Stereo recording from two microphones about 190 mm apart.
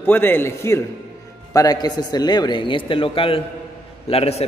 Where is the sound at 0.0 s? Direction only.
10° left (ahead or behind).